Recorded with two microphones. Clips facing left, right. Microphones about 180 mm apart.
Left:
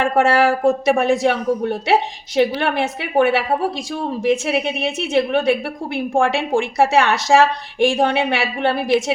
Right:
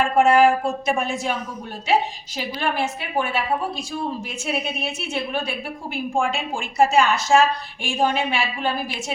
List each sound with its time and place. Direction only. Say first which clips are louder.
0.0 s speech: even; 70° left (ahead or behind)